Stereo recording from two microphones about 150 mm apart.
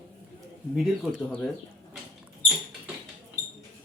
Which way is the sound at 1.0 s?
Centre (ahead or behind).